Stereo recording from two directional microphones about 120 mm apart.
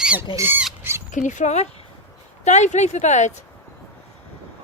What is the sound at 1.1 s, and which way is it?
Speech, 90° left.